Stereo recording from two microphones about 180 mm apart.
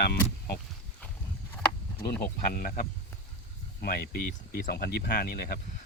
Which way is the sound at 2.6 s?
50° left (ahead or behind).